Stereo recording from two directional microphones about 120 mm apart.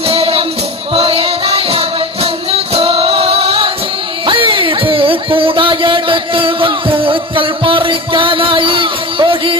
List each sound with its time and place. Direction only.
0.1 s music: 50° right (ahead or behind)